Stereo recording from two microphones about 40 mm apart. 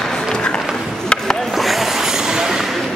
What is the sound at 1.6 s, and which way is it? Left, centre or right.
Vehicle, centre.